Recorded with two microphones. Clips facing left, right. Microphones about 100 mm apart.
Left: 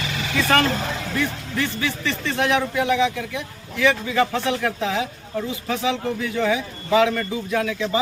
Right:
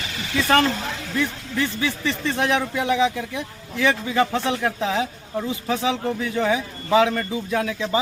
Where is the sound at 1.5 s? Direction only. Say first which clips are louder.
Right 2 dB; 20° right (ahead or behind).